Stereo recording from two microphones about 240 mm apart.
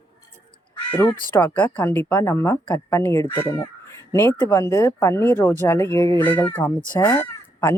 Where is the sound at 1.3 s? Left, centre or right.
Centre.